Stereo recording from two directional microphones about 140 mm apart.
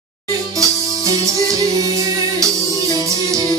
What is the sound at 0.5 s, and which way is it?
Music, 25° right (ahead or behind).